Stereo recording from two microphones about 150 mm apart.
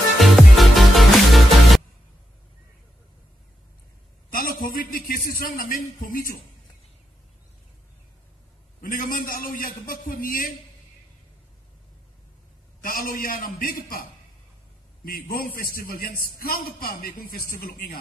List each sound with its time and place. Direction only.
0.2 s music: centre (ahead or behind)
4.3 s a man's voice: 70° left (ahead or behind)
8.8 s a man's voice: 65° left (ahead or behind)
12.8 s a man's voice: 65° left (ahead or behind)
15.0 s a man's voice: 75° left (ahead or behind)